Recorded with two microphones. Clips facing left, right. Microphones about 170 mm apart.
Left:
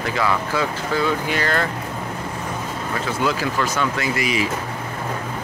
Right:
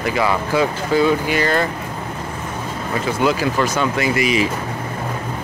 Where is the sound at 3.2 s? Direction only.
15° right (ahead or behind).